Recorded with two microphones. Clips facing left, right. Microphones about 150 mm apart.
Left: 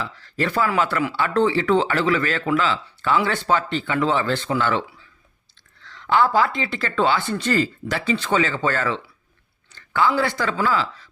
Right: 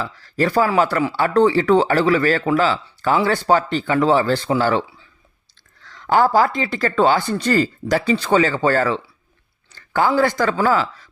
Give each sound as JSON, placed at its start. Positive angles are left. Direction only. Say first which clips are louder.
{"t": 0.0, "sound": "speech", "louder": "right 5 dB", "side_deg": -40}
{"t": 5.8, "sound": "speech", "louder": "right 3 dB", "side_deg": -45}